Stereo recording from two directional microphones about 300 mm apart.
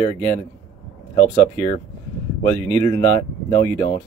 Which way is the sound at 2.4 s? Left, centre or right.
Centre.